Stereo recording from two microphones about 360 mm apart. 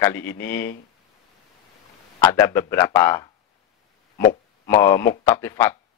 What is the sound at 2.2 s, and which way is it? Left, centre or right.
A man's voice, centre.